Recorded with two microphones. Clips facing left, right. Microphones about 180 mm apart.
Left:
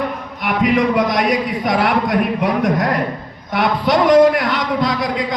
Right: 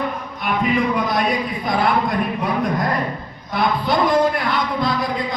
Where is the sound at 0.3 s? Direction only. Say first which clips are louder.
Left 4 dB; 80° left.